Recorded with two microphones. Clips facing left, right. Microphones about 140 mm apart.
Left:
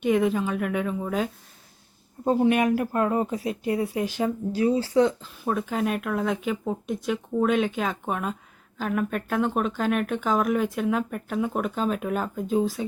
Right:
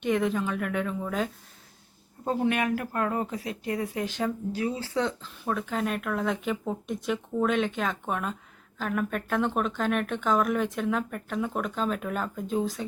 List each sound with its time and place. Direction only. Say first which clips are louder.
0.0 s speech: left 4 dB; 10° left (ahead or behind)
2.2 s speech: left 5 dB; 20° left (ahead or behind)
4.5 s speech: left 7 dB; 35° left (ahead or behind)
4.9 s speech: left 8 dB; 10° left (ahead or behind)